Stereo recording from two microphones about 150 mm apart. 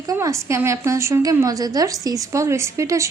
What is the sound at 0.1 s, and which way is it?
A woman's voice, 20° right (ahead or behind).